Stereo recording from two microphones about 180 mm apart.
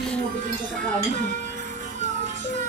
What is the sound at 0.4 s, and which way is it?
Music, 45° right (ahead or behind).